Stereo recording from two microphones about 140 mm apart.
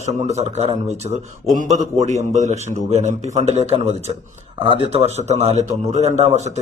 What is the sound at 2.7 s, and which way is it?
Speech, 60° left (ahead or behind).